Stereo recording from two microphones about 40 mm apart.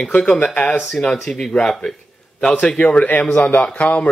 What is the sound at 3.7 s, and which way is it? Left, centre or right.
Speech, left.